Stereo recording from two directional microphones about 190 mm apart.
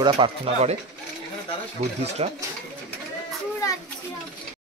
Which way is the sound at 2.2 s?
30° right (ahead or behind).